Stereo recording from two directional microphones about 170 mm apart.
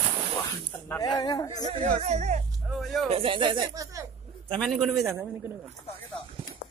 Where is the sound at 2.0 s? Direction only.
40° right (ahead or behind).